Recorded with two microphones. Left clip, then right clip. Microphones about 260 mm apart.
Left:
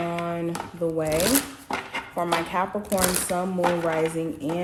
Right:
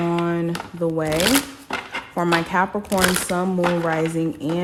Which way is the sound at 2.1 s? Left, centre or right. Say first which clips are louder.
Right 5 dB; right.